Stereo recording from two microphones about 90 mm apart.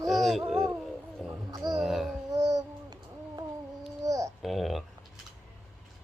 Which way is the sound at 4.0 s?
35° right (ahead or behind).